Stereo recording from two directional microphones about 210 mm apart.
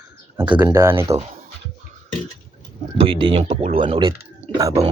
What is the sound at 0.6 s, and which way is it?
Speech, 10° right (ahead or behind).